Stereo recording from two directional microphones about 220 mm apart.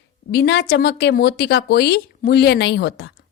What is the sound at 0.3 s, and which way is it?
Speech, 50° left (ahead or behind).